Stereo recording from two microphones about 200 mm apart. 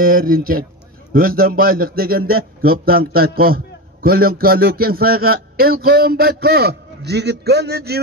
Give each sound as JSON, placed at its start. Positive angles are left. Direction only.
{"t": 0.0, "sound": "a man's voice", "side_deg": -45}